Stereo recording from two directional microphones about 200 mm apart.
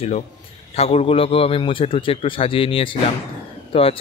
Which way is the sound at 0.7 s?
30° left (ahead or behind).